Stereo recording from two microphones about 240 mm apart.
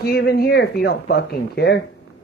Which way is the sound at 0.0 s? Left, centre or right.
Left.